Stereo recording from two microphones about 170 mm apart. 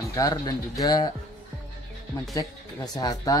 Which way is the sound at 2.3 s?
25° left (ahead or behind).